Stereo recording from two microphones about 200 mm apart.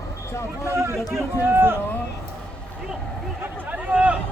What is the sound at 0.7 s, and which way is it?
Speech, 15° right (ahead or behind).